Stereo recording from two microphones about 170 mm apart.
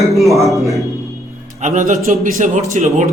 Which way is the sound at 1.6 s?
45° right (ahead or behind).